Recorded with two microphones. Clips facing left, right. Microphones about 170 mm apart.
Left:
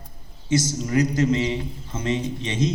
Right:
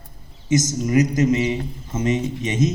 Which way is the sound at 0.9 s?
20° right (ahead or behind).